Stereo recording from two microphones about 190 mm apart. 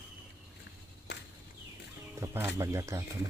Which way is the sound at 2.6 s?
15° right (ahead or behind).